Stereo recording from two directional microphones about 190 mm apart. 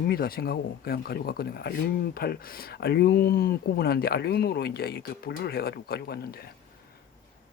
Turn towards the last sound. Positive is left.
turn(degrees=55)  # may be behind; listen again after turning